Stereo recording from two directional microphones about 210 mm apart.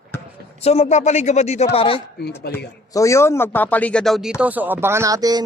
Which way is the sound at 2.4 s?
50° left (ahead or behind).